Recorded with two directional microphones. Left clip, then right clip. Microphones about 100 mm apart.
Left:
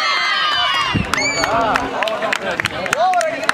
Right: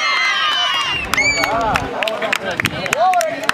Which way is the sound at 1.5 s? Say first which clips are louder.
Left 1 dB; 80° left.